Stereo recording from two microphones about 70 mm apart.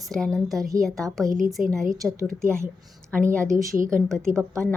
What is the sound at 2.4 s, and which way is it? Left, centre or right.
Speech, right.